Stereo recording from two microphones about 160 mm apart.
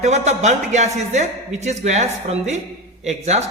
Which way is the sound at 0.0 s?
45° right (ahead or behind).